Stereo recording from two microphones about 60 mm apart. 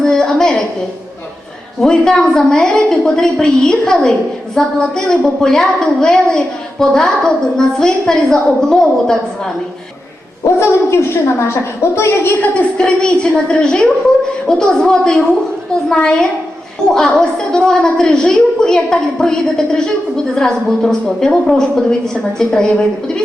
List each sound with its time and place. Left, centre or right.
0.0 s a sound: centre
1.8 s a woman's voice: centre
10.4 s a woman's voice: left
12.4 s a woman's voice: centre